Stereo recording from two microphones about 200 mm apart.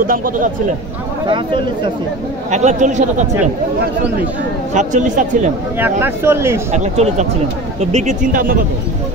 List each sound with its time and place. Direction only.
0.0 s speech: 45° right (ahead or behind)
1.2 s speech: 25° right (ahead or behind)
2.5 s speech: 35° right (ahead or behind)
4.7 s speech: 40° right (ahead or behind)
5.8 s speech: 10° right (ahead or behind)
6.7 s speech: 35° right (ahead or behind)